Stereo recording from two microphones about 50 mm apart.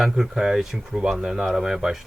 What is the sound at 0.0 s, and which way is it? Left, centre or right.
A man's voice, centre.